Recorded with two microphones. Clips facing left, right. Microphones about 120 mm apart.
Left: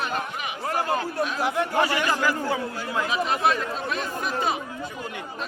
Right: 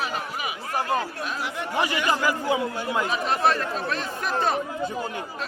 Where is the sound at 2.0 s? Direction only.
15° right (ahead or behind).